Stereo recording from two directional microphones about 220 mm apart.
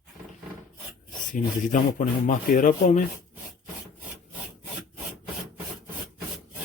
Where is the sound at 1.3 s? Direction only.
35° left (ahead or behind).